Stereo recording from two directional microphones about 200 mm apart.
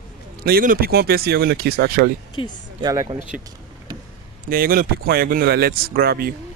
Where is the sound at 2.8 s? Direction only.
20° right (ahead or behind).